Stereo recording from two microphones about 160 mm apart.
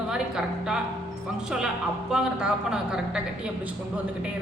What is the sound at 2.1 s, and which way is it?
A woman's voice, 5° right (ahead or behind).